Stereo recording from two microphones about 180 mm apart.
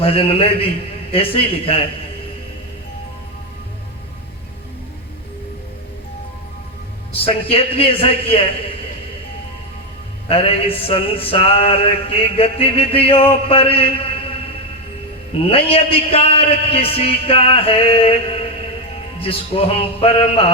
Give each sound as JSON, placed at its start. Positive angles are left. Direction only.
{"t": 0.0, "sound": "music", "side_deg": 30}
{"t": 7.1, "sound": "music", "side_deg": 30}
{"t": 10.2, "sound": "music", "side_deg": 30}
{"t": 15.4, "sound": "music", "side_deg": 30}